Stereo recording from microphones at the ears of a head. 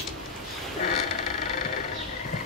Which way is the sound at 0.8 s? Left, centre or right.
Left.